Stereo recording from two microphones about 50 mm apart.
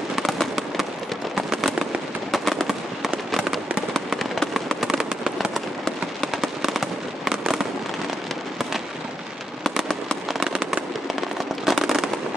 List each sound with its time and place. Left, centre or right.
0.1 s fireworks: centre
9.6 s fireworks: centre
10.5 s fireworks: centre
11.1 s firecracker: centre